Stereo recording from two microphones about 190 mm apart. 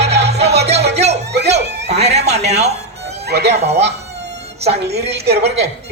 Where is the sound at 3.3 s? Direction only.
60° right (ahead or behind).